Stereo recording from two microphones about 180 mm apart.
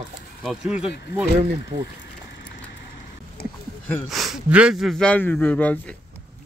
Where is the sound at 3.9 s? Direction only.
Centre (ahead or behind).